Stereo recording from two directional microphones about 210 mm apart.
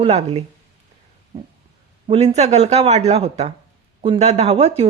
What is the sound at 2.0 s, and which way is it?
Speech, 30° right (ahead or behind).